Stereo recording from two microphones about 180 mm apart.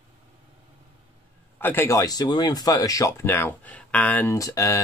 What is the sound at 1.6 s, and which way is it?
Speech, 15° left (ahead or behind).